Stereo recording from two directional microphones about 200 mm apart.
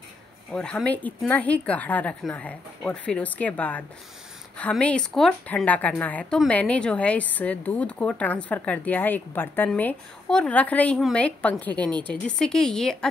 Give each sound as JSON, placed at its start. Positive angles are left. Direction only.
{"t": 0.5, "sound": "a woman's voice", "side_deg": 5}